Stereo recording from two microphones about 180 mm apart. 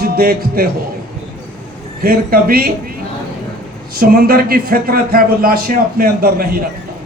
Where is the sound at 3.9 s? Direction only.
55° right (ahead or behind).